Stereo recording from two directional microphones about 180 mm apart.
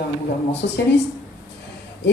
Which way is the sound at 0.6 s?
65° left (ahead or behind).